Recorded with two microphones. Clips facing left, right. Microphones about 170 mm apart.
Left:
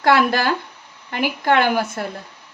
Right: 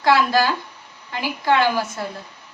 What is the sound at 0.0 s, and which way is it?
A woman's voice, 60° left (ahead or behind).